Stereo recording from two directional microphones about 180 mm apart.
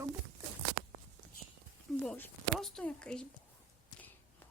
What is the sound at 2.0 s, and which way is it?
Speech, 5° left (ahead or behind).